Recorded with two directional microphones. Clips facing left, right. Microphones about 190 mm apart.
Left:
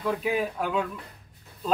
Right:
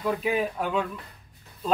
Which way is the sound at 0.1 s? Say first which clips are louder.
Right 1 dB; centre (ahead or behind).